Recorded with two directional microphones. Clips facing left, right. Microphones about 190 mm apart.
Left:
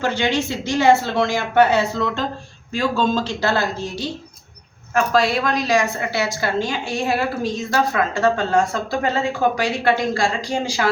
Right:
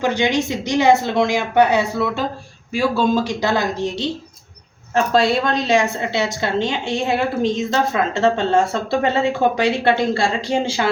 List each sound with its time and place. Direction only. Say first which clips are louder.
0.0 s a woman's voice: right 2 dB; 15° right (ahead or behind)